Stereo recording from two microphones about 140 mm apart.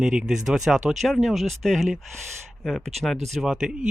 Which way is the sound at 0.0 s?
5° right (ahead or behind).